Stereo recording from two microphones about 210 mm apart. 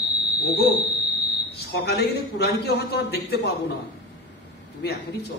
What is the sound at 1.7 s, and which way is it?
A man's voice, 50° left (ahead or behind).